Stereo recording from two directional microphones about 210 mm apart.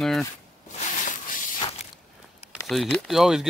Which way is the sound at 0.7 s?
35° left (ahead or behind).